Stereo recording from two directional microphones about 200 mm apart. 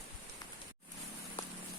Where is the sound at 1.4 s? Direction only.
25° left (ahead or behind).